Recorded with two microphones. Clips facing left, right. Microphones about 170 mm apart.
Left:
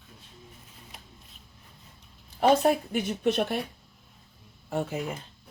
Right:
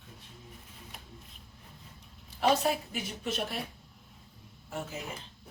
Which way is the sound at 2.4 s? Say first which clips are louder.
Left 6 dB; 55° left (ahead or behind).